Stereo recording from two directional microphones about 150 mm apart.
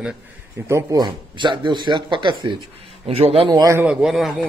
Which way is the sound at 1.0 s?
30° right (ahead or behind).